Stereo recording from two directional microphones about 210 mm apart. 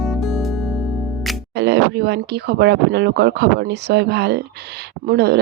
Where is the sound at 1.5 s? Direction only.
50° right (ahead or behind).